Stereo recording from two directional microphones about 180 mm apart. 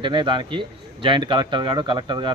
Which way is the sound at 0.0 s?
25° right (ahead or behind).